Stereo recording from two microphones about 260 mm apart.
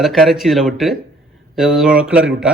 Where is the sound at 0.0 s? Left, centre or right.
Centre.